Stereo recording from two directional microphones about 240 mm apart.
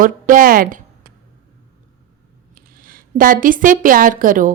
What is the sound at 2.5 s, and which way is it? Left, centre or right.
A woman's voice, right.